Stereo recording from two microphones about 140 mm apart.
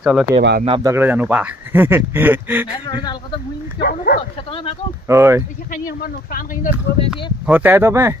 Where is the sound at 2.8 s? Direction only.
35° left (ahead or behind).